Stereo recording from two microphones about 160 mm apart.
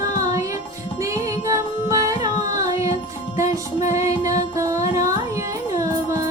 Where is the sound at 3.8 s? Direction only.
45° left (ahead or behind).